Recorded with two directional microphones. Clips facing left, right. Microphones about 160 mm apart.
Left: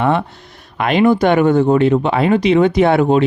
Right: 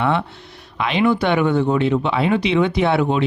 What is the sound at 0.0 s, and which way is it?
Speech, 45° left (ahead or behind).